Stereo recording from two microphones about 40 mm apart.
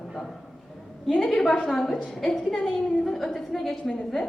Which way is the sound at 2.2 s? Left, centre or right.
Centre.